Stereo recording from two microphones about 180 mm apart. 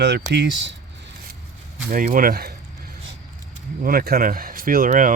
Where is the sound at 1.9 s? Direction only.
50° right (ahead or behind).